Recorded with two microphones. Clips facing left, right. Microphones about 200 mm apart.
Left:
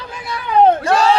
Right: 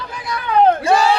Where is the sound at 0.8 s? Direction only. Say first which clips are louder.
Right 1 dB; 10° right (ahead or behind).